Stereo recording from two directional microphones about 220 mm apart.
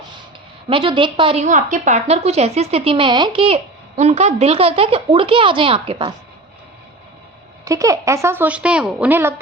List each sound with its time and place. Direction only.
0.7 s a woman's voice: 25° right (ahead or behind)
7.6 s a woman's voice: 15° right (ahead or behind)